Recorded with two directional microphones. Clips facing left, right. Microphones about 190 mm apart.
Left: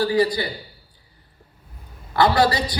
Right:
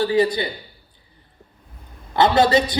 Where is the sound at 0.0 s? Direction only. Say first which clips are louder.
Right 1 dB; 20° right (ahead or behind).